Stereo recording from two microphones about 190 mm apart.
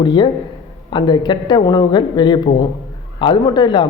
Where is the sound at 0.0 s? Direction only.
25° left (ahead or behind).